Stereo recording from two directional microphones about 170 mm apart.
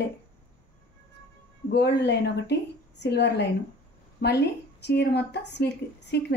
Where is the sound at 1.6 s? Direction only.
75° left (ahead or behind).